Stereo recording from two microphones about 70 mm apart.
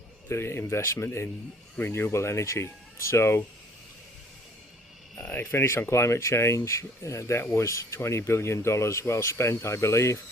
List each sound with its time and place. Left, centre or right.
0.3 s speech: left
5.2 s speech: left